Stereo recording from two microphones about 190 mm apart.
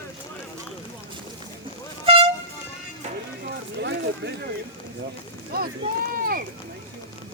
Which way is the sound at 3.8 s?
65° right (ahead or behind).